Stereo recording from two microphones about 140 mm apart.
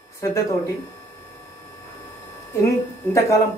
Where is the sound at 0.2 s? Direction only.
20° left (ahead or behind).